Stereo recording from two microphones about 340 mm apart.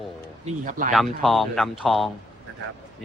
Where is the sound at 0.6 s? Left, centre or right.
Right.